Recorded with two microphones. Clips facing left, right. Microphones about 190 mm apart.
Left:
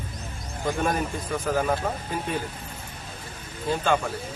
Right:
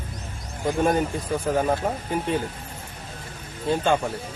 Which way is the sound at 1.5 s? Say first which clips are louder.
Right 2 dB; 30° right (ahead or behind).